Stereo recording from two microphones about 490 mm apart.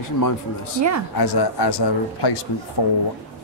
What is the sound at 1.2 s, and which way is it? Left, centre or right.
Speech, left.